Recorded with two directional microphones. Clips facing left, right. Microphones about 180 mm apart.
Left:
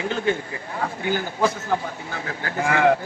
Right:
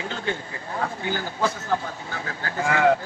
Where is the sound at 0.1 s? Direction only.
15° left (ahead or behind).